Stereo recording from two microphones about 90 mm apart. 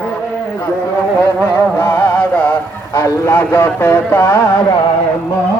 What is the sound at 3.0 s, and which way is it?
Music, 25° left (ahead or behind).